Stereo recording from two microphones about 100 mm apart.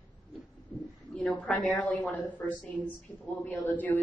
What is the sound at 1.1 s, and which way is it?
A woman's voice, 15° left (ahead or behind).